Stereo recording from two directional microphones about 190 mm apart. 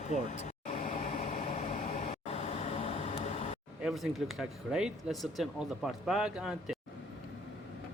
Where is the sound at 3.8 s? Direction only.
Centre (ahead or behind).